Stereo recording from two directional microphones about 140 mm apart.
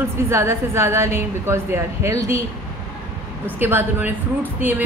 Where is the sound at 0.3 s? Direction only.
20° right (ahead or behind).